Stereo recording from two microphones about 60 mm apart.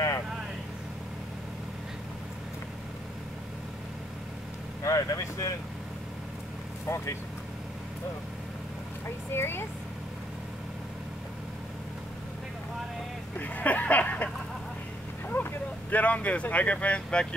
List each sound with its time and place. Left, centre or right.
4.8 s vehicle: left
6.9 s speech: left
9.3 s speech: left
13.4 s a sound: left
15.2 s speech: left